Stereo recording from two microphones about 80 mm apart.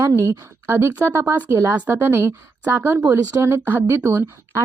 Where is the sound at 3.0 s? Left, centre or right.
Right.